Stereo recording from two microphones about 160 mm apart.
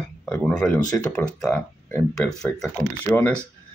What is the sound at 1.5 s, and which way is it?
Speech, 15° left (ahead or behind).